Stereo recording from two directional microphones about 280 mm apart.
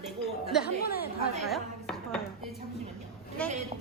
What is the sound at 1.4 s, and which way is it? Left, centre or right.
Chopping, centre.